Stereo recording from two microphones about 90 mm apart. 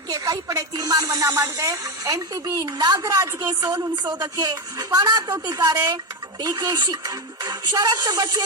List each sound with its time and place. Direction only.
0.1 s speech: 45° right (ahead or behind)